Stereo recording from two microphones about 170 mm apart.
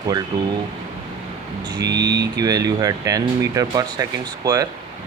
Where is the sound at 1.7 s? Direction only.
25° right (ahead or behind).